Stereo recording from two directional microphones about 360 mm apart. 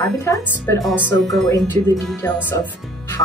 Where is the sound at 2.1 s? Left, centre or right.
Centre.